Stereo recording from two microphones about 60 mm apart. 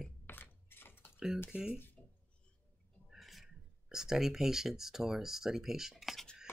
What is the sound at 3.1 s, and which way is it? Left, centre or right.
Speech, centre.